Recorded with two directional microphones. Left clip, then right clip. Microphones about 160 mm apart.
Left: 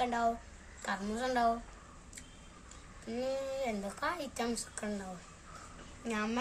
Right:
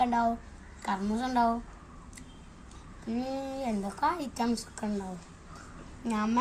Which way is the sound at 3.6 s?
30° left (ahead or behind).